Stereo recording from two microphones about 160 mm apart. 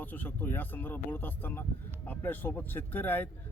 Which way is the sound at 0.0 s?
10° left (ahead or behind).